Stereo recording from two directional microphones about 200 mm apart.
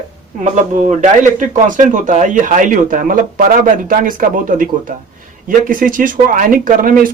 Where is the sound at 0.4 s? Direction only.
35° right (ahead or behind).